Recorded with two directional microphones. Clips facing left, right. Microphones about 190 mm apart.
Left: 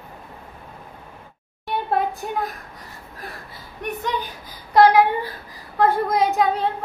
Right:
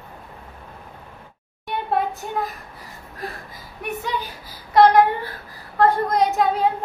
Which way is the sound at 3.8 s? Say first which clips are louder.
Left 1 dB; 5° right (ahead or behind).